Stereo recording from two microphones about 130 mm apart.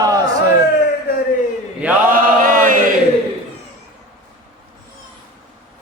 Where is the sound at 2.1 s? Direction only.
90° right.